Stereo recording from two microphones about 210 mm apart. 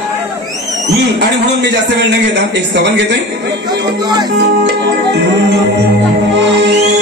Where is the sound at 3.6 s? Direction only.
20° right (ahead or behind).